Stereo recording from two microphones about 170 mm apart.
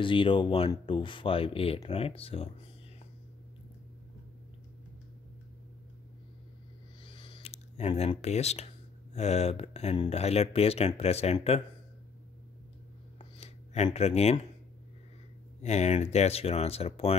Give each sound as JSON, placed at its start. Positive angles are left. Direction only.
{"t": 0.0, "sound": "speech", "side_deg": 30}
{"t": 7.1, "sound": "a sound", "side_deg": 30}
{"t": 9.1, "sound": "speech", "side_deg": 40}
{"t": 13.9, "sound": "speech", "side_deg": 40}
{"t": 15.6, "sound": "speech", "side_deg": 40}